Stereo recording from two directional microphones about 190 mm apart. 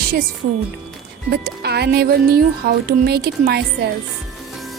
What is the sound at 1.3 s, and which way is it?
Speech, 60° right (ahead or behind).